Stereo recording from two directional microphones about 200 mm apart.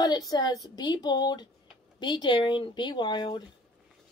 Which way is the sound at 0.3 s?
20° left (ahead or behind).